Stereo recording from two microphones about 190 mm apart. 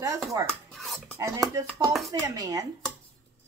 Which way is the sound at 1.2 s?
15° right (ahead or behind).